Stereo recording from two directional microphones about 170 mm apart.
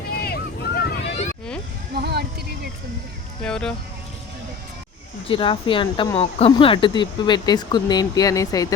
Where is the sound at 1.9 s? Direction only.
70° right (ahead or behind).